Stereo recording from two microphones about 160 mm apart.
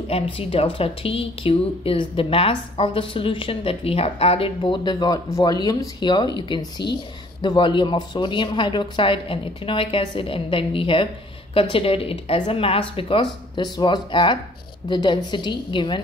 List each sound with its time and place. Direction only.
0.1 s a woman's voice: 35° left (ahead or behind)